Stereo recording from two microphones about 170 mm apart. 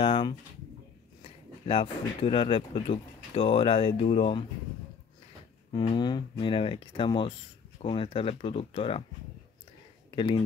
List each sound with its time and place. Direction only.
0.0 s speech: 30° left (ahead or behind)
5.7 s speech: 25° left (ahead or behind)
10.1 s speech: 30° left (ahead or behind)